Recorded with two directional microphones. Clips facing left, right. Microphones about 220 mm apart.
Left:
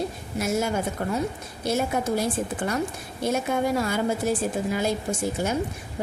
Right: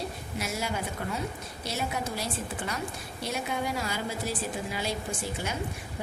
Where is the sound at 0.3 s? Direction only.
50° left (ahead or behind).